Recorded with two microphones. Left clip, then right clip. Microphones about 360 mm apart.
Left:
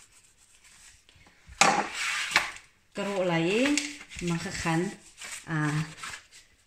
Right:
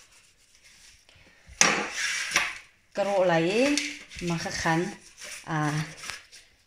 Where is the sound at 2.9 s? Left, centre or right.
Centre.